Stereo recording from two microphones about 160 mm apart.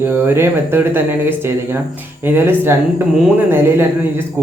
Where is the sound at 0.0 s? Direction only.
15° right (ahead or behind).